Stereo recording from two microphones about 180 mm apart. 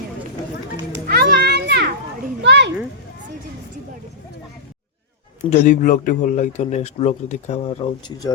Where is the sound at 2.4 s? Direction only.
70° right (ahead or behind).